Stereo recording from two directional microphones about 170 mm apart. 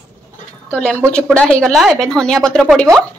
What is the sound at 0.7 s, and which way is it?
A woman's voice, 5° left (ahead or behind).